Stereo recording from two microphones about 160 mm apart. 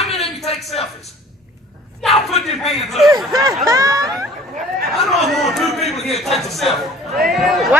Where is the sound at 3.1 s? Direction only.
20° right (ahead or behind).